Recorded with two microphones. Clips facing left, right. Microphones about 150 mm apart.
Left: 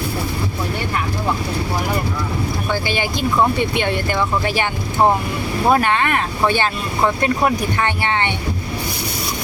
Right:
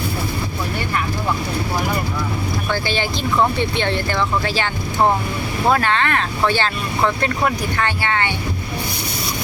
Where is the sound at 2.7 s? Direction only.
10° left (ahead or behind).